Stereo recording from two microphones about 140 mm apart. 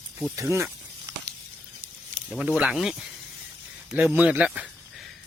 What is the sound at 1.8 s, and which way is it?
Snake, 90° right.